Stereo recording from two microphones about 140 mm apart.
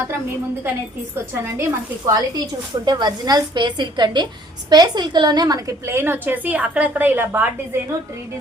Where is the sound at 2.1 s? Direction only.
30° right (ahead or behind); by 7.5 s 15° right (ahead or behind).